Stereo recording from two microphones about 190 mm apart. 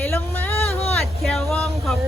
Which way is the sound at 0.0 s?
10° left (ahead or behind).